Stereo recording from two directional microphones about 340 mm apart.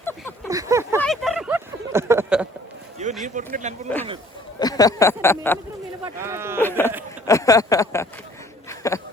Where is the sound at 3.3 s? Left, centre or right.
Right.